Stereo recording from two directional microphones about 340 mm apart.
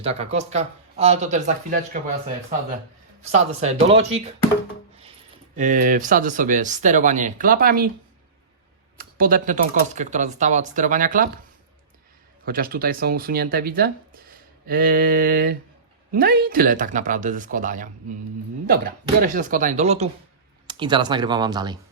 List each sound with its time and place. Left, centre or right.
0.0 s speech: centre
3.3 s speech: centre
5.5 s speech: right
9.0 s speech: right
12.5 s speech: right
19.2 s speech: right